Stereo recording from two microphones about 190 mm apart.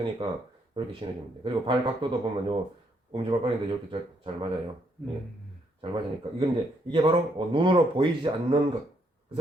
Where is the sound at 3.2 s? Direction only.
30° right (ahead or behind).